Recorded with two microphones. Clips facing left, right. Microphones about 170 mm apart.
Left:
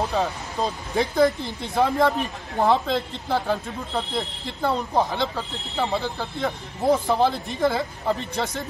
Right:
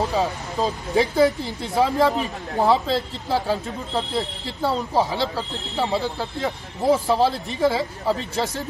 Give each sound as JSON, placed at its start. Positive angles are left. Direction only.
{"t": 0.1, "sound": "speech", "side_deg": 0}